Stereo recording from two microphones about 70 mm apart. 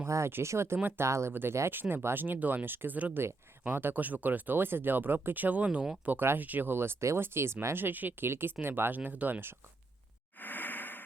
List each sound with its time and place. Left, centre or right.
0.0 s speech: right
0.8 s speech: right
1.0 s speech: right
1.3 s speech: right
10.4 s a sound: left